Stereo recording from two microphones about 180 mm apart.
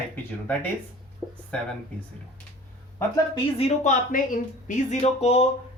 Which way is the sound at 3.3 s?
35° left (ahead or behind).